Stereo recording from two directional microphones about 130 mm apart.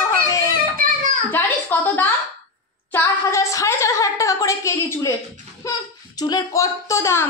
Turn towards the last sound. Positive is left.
turn(degrees=20)  # may be behind; listen again after turning